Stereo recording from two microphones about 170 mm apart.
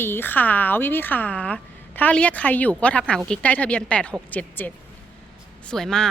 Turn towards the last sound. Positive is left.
turn(degrees=5)  # may be behind; listen again after turning